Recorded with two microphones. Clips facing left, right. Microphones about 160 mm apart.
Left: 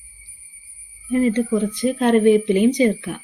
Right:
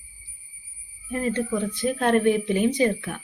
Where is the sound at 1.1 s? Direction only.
15° left (ahead or behind).